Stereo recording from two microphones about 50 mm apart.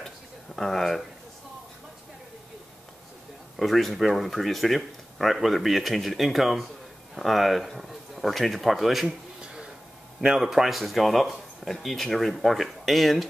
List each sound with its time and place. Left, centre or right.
0.6 s speech: centre
3.5 s speech: centre
9.4 s a sound: centre
10.2 s speech: centre